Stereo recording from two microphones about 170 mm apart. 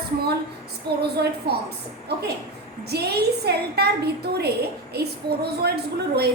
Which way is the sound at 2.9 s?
70° right (ahead or behind).